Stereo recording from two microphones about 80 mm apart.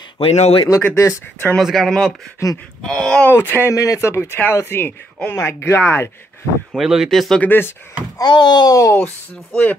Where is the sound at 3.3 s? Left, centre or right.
Left.